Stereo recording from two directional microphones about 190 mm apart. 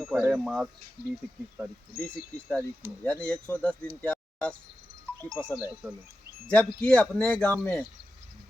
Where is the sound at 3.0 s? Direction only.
5° left (ahead or behind).